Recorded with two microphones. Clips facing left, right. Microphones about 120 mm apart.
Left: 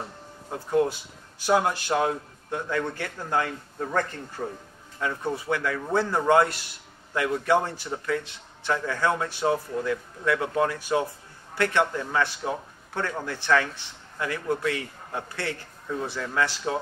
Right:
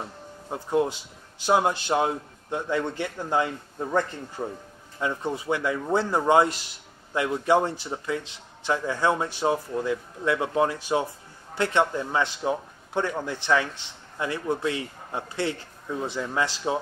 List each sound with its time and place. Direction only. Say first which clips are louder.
0.5 s speech: left 1 dB; 20° right (ahead or behind)